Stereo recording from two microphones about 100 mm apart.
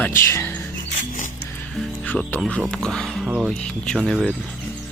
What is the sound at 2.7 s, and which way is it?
Speech, 5° left (ahead or behind).